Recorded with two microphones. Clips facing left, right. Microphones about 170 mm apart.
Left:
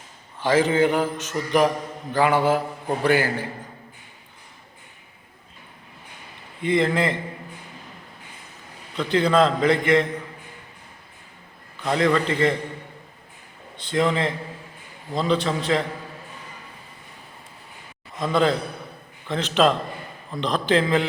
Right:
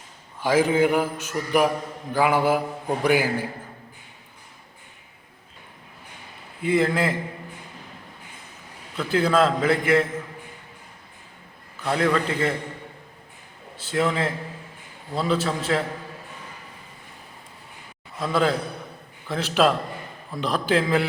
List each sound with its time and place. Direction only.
0.4 s a man's voice: 10° right (ahead or behind)
6.6 s a man's voice: 5° right (ahead or behind)
9.0 s a man's voice: 5° right (ahead or behind)
11.8 s a man's voice: 5° right (ahead or behind)
13.7 s a man's voice: 5° right (ahead or behind)
18.2 s a man's voice: 5° right (ahead or behind)